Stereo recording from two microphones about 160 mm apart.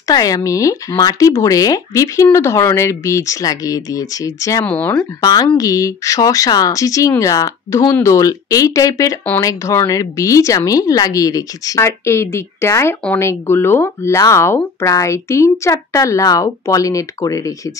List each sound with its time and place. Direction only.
0.0 s speech: 20° left (ahead or behind)
4.6 s speech: 10° left (ahead or behind)
5.2 s speech: 25° left (ahead or behind)